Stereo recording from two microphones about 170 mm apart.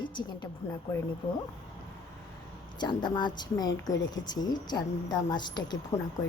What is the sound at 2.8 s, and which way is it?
Speech, 25° left (ahead or behind).